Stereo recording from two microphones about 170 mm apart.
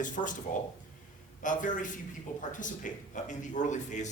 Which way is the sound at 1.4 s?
50° left (ahead or behind).